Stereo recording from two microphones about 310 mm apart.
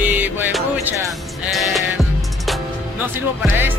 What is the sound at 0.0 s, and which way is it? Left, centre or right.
Music, centre.